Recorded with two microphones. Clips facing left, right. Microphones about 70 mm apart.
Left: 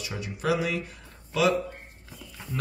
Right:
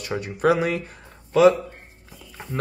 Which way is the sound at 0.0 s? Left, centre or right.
Right.